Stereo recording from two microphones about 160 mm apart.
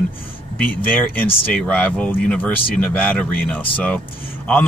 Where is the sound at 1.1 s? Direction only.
5° left (ahead or behind).